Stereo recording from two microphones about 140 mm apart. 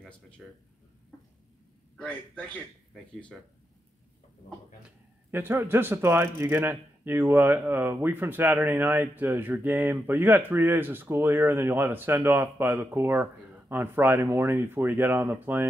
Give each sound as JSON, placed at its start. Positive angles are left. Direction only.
{"t": 0.4, "sound": "speech", "side_deg": -5}
{"t": 2.0, "sound": "a man's voice", "side_deg": 10}
{"t": 4.8, "sound": "speech", "side_deg": -15}